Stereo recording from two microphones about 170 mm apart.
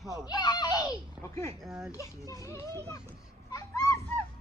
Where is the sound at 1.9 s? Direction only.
20° left (ahead or behind).